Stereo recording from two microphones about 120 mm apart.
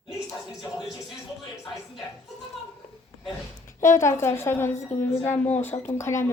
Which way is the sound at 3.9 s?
25° left (ahead or behind).